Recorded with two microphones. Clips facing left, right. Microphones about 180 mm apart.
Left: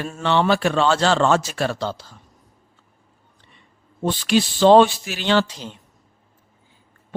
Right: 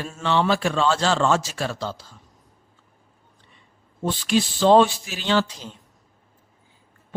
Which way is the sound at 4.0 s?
75° left (ahead or behind).